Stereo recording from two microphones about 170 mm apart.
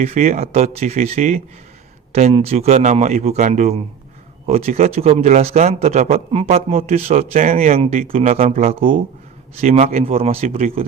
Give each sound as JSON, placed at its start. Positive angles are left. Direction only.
{"t": 0.0, "sound": "speech", "side_deg": -50}
{"t": 7.8, "sound": "speech", "side_deg": -35}
{"t": 8.7, "sound": "speech", "side_deg": -30}